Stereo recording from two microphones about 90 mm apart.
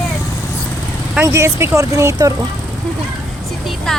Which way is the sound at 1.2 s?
30° right (ahead or behind).